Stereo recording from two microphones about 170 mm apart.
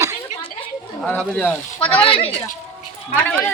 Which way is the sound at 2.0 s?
35° left (ahead or behind).